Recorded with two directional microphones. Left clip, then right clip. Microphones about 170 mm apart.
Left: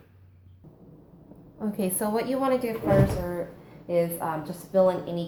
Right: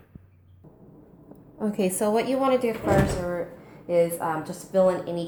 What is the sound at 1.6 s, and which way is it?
A woman's voice, 50° right (ahead or behind).